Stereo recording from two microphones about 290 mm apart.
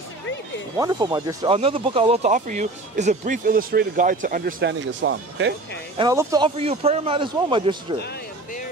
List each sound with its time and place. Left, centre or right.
0.8 s speech: centre; by 5.5 s right
6.0 s speech: centre